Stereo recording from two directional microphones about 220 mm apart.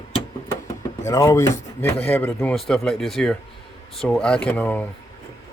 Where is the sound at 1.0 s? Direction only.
15° left (ahead or behind).